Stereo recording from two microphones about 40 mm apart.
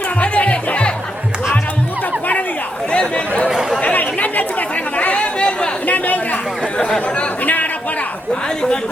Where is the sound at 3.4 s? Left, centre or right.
Centre.